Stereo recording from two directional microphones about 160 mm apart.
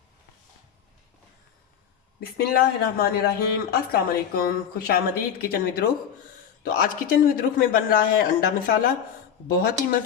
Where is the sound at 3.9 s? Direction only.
65° left (ahead or behind).